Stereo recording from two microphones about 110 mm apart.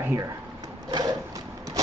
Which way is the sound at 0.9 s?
40° right (ahead or behind).